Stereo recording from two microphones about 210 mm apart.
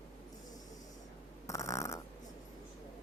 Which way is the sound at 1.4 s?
15° left (ahead or behind).